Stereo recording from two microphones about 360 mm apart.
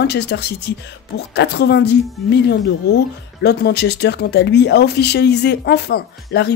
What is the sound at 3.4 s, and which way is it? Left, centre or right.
Speech, left.